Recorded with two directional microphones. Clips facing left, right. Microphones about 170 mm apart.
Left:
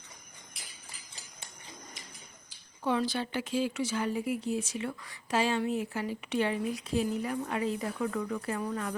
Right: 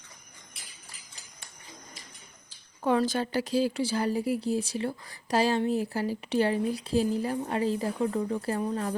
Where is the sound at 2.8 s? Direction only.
45° right (ahead or behind).